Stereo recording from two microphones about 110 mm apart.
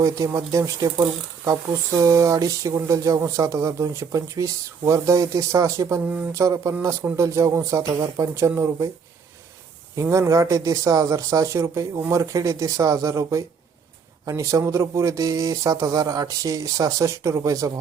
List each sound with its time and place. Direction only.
0.3 s speech: 30° right (ahead or behind)
9.9 s speech: 25° right (ahead or behind)